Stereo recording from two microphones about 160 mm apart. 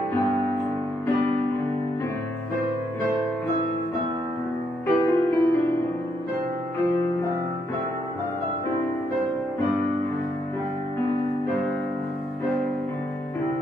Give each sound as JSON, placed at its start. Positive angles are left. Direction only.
{"t": 4.8, "sound": "music", "side_deg": 20}